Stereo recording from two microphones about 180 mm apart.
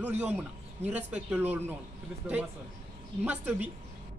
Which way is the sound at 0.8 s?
10° right (ahead or behind).